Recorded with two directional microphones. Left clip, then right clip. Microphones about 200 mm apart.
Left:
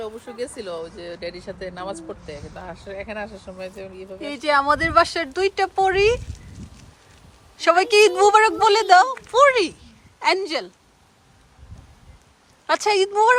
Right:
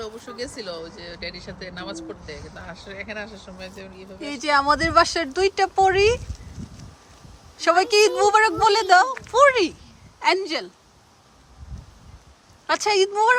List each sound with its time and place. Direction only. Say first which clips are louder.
0.0 s speech: left 2 dB; 40° left (ahead or behind)
4.2 s speech: left 1 dB; 5° right (ahead or behind)
7.6 s speech: left 2 dB; 5° right (ahead or behind)
12.6 s a woman's voice: left 1 dB; 5° right (ahead or behind)